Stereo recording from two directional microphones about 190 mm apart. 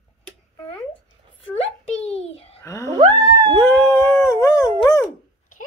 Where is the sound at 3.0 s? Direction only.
20° right (ahead or behind).